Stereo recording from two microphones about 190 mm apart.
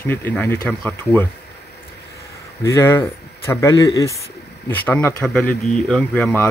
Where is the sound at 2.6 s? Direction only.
15° left (ahead or behind).